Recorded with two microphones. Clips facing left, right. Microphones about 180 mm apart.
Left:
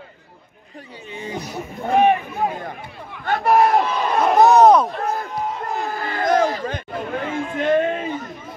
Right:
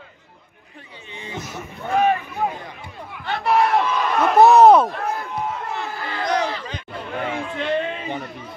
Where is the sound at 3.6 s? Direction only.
35° left (ahead or behind).